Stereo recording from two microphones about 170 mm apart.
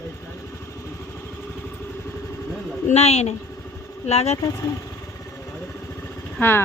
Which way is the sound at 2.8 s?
40° left (ahead or behind).